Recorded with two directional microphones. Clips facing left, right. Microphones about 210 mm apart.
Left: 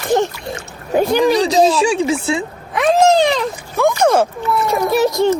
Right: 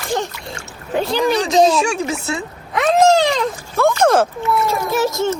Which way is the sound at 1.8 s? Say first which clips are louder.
Left 4 dB; 30° left (ahead or behind).